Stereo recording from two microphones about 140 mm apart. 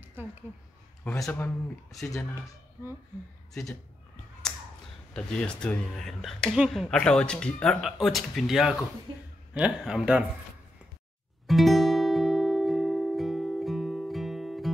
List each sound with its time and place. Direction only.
1.3 s speech: 20° left (ahead or behind)
5.1 s speech: 5° left (ahead or behind)
9.1 s speech: 35° right (ahead or behind)
9.5 s a man's voice: 5° right (ahead or behind)
11.4 s music: centre (ahead or behind)